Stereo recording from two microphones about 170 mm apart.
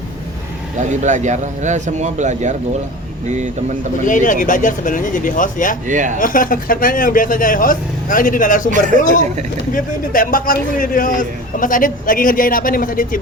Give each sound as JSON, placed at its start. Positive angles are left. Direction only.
{"t": 0.8, "sound": "speech", "side_deg": -45}
{"t": 4.0, "sound": "a man's voice", "side_deg": 50}
{"t": 5.9, "sound": "speech", "side_deg": -50}
{"t": 6.1, "sound": "a man's voice", "side_deg": 55}
{"t": 9.7, "sound": "a man's voice", "side_deg": 55}